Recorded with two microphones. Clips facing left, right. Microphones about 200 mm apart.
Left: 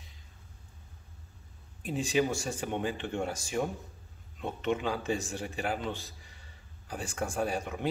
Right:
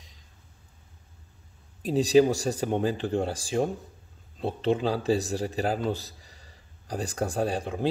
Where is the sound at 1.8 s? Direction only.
35° right (ahead or behind).